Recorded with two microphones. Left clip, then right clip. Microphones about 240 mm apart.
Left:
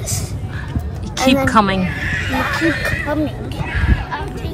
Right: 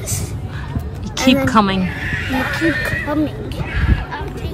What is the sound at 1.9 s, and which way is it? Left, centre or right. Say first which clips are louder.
Speech: left 1 dB; left.